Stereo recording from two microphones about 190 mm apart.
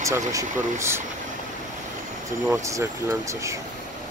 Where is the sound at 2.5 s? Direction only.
15° right (ahead or behind).